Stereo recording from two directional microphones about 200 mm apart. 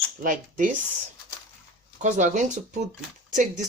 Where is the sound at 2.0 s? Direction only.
40° right (ahead or behind).